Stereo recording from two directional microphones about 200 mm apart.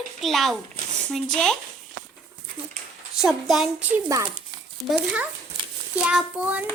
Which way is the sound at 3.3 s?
Centre (ahead or behind).